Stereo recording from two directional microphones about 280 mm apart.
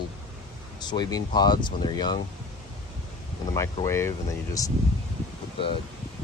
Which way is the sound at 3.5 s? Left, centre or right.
Centre.